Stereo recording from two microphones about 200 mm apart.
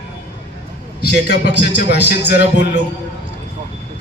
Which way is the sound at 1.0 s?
55° left (ahead or behind).